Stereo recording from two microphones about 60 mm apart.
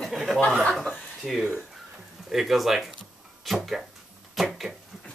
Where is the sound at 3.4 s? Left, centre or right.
Centre.